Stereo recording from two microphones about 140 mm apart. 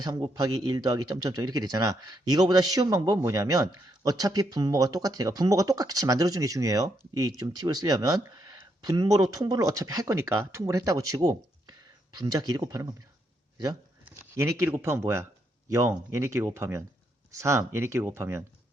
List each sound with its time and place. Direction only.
0.0 s speech: 30° right (ahead or behind)
14.3 s speech: 20° right (ahead or behind)